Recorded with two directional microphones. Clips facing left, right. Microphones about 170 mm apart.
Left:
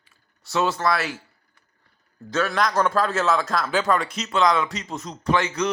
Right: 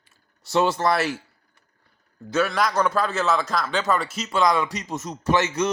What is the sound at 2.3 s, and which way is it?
A man's voice, 5° right (ahead or behind).